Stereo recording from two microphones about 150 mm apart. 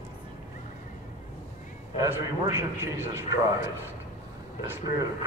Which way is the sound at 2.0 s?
15° right (ahead or behind).